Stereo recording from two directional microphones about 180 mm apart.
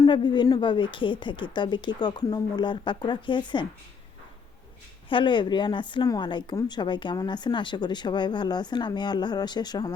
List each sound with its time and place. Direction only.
0.0 s a woman's voice: 25° left (ahead or behind)
5.0 s a woman's voice: 25° left (ahead or behind)